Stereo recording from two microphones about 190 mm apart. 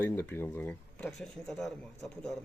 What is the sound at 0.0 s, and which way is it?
Speech, 10° left (ahead or behind).